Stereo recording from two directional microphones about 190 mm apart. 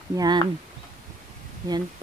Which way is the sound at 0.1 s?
20° right (ahead or behind).